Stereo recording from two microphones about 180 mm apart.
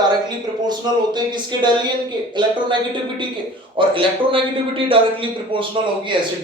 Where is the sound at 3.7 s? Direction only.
30° right (ahead or behind).